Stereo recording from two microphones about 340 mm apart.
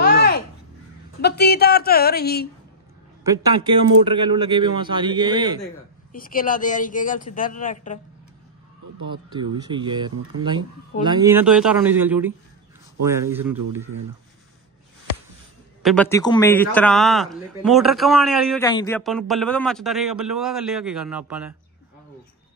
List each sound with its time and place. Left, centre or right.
0.0 s crow: left
1.2 s speech: left
4.1 s a man's voice: centre
6.1 s speech: left
9.1 s a man's voice: centre
15.8 s a man's voice: centre